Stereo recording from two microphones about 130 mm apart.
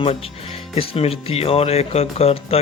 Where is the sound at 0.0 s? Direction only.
45° left (ahead or behind).